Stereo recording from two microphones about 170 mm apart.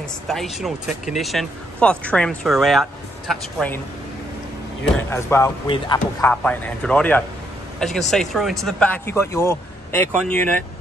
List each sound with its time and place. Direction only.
0.3 s speech: centre (ahead or behind)
4.9 s speech: 15° left (ahead or behind)